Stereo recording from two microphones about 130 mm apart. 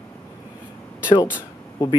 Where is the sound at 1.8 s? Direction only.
25° left (ahead or behind).